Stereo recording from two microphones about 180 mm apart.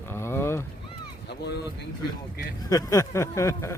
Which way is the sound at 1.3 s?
65° left (ahead or behind).